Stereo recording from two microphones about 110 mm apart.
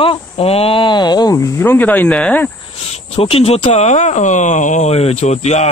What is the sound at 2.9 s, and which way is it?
Speech, 65° left (ahead or behind).